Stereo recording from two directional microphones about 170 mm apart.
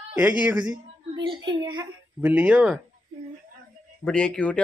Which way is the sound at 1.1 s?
30° right (ahead or behind).